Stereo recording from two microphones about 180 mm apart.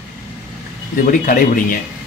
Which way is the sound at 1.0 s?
50° left (ahead or behind).